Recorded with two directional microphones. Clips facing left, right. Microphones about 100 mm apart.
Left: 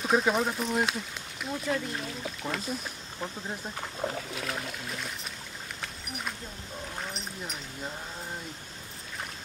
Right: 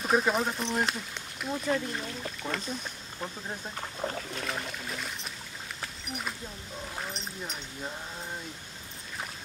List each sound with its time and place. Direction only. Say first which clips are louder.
0.0 s speech: left 1 dB; centre (ahead or behind)
5.8 s a sound: right 2 dB; centre (ahead or behind)
7.0 s speech: right 1 dB; centre (ahead or behind)